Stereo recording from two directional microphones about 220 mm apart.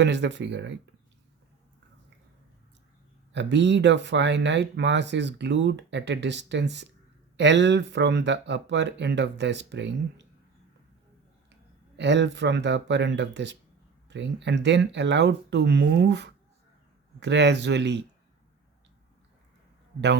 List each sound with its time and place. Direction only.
0.0 s speech: 55° right (ahead or behind)
3.3 s speech: 55° right (ahead or behind)
11.9 s speech: 50° right (ahead or behind)